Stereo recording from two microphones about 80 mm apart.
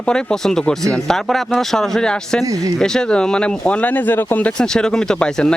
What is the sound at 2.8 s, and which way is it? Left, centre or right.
A man's voice, centre.